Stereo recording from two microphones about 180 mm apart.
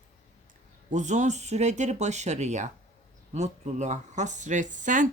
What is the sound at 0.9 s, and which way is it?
Speech, 45° right (ahead or behind).